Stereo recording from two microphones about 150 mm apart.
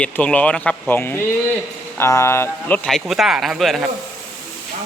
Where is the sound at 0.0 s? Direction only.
10° left (ahead or behind).